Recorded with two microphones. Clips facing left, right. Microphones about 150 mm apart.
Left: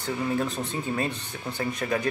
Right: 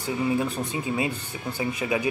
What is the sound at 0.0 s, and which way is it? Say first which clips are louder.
Speech: right 2 dB; 10° right (ahead or behind).